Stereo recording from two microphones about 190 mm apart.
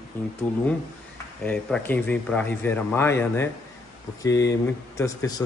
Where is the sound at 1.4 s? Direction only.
5° left (ahead or behind).